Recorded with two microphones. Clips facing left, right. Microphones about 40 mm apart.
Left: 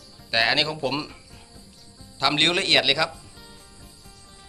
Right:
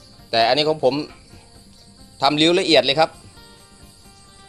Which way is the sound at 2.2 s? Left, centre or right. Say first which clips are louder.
Right 5 dB; centre.